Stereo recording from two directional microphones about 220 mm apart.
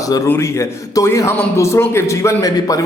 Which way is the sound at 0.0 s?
15° left (ahead or behind).